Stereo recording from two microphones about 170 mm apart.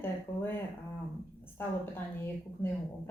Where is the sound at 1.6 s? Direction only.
15° left (ahead or behind).